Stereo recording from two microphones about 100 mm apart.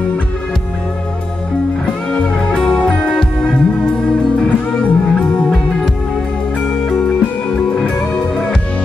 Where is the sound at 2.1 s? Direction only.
10° left (ahead or behind).